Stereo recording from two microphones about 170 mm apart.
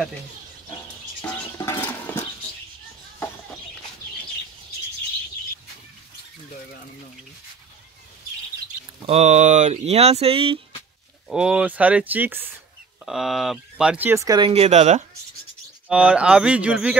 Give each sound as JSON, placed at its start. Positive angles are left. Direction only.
{"t": 1.2, "sound": "a sound", "side_deg": 10}
{"t": 9.0, "sound": "speech", "side_deg": -40}
{"t": 11.2, "sound": "speech", "side_deg": -5}
{"t": 14.5, "sound": "speech", "side_deg": -40}
{"t": 15.9, "sound": "speech", "side_deg": -5}